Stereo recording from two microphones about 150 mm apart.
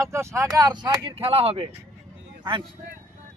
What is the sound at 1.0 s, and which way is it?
Speech, 40° right (ahead or behind).